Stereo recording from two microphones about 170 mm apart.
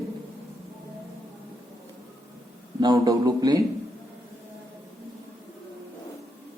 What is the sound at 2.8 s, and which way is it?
Speech, 20° right (ahead or behind).